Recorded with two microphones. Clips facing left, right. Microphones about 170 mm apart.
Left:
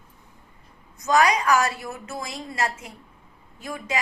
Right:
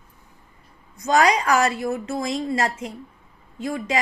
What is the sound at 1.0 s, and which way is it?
A woman's voice, 30° right (ahead or behind).